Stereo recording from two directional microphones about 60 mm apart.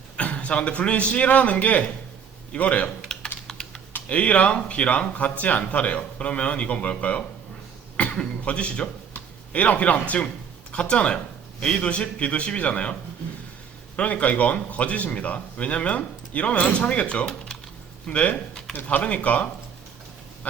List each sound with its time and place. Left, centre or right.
0.2 s a man's voice: left
3.4 s typing: centre
4.1 s a man's voice: left